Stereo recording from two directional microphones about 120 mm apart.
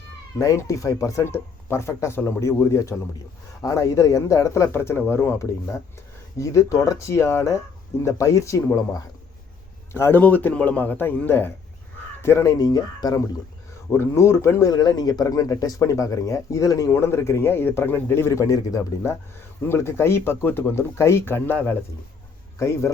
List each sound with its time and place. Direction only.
0.3 s a man's voice: 25° left (ahead or behind)
13.9 s speech: 20° left (ahead or behind)